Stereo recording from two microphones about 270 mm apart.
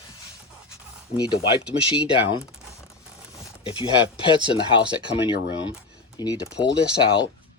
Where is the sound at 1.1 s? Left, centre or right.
Centre.